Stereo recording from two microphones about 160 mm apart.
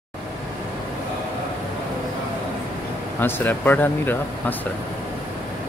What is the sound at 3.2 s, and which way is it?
Speech, 10° left (ahead or behind).